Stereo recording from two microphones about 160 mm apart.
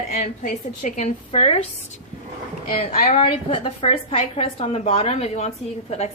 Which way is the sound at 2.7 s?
40° left (ahead or behind).